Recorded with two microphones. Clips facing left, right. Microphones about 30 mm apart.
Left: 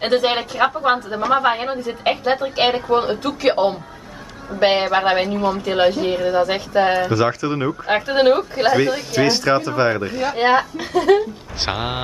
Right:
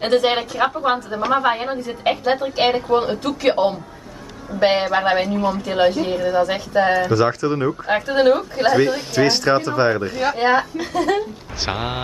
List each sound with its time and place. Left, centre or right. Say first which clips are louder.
0.0 s a woman's voice: right 1 dB; centre
8.9 s a woman's voice: even; centre